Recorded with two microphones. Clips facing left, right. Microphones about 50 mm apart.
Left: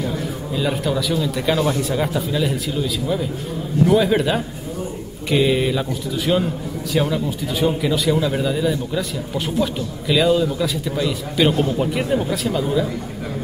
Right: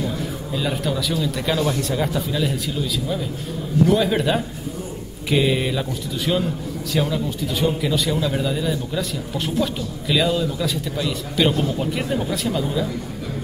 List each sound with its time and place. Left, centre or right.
0.5 s a man's voice: centre